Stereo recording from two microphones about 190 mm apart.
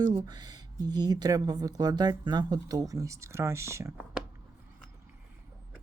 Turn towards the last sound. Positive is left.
turn(degrees=-15)  # may be behind; listen again after turning